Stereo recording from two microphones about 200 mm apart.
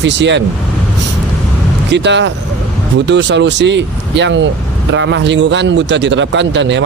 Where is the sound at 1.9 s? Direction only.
60° right (ahead or behind).